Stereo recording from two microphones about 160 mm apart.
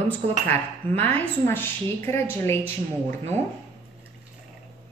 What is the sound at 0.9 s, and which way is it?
A woman's voice, 10° left (ahead or behind).